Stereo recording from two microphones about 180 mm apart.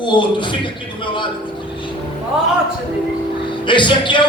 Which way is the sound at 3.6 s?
25° left (ahead or behind).